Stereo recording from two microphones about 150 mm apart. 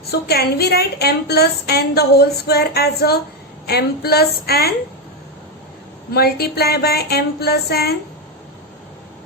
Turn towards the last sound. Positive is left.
turn(degrees=90)